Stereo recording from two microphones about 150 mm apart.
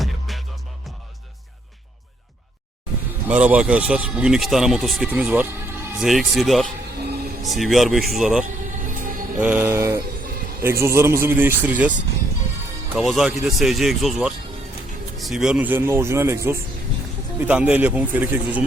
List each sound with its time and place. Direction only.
0.0 s music: centre (ahead or behind)
3.2 s speech: 10° right (ahead or behind)
6.0 s speech: centre (ahead or behind)
8.8 s music: 60° right (ahead or behind)
9.4 s speech: 10° right (ahead or behind)
13.0 s speech: centre (ahead or behind)